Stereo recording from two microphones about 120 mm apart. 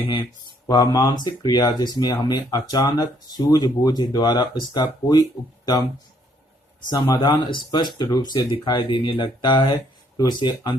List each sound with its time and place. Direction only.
0.0 s speech: 45° left (ahead or behind)
0.7 s speech: 30° left (ahead or behind)
7.2 s speech: 40° left (ahead or behind)